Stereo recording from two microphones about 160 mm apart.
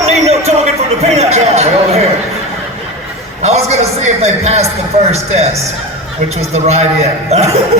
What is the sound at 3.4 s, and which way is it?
A man's voice, 45° right (ahead or behind).